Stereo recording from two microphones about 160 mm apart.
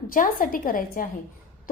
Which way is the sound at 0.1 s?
60° left (ahead or behind).